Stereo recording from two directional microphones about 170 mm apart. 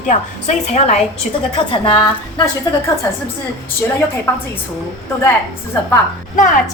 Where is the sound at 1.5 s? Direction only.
30° left (ahead or behind).